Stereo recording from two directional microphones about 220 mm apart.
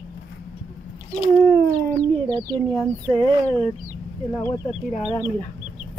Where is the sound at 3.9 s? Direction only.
10° left (ahead or behind).